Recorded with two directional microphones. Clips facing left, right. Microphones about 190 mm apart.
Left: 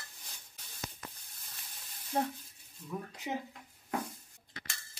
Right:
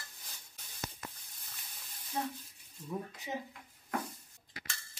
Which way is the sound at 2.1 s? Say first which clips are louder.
Left 4 dB; 55° left (ahead or behind).